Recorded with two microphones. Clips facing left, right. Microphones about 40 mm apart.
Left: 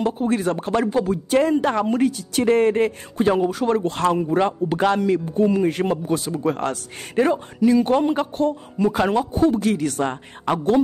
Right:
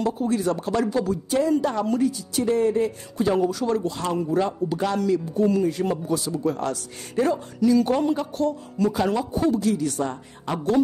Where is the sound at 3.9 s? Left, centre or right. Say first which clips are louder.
Left 7 dB; left.